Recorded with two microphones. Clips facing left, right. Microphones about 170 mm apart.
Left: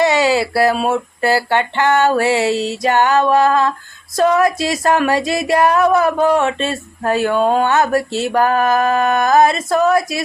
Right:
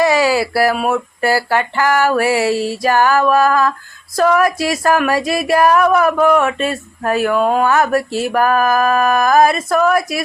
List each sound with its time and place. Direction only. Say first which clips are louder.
0.0 s speech: even; 25° left (ahead or behind)